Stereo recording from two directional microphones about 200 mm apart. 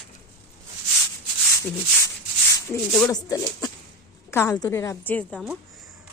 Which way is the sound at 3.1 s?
15° left (ahead or behind).